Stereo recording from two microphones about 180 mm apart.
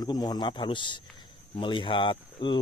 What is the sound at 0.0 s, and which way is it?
Speech, 20° left (ahead or behind).